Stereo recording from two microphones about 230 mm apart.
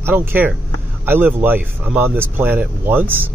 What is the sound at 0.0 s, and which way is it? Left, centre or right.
Speech, centre.